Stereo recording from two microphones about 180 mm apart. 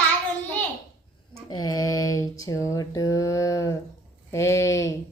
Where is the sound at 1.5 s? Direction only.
20° left (ahead or behind).